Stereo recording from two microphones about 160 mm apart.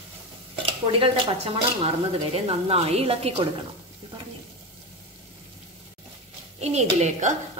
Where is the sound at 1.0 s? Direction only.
35° right (ahead or behind).